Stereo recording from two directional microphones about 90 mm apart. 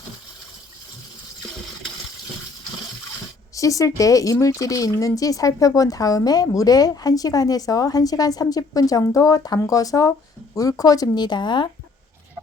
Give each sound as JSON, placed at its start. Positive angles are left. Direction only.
{"t": 3.5, "sound": "speech", "side_deg": 40}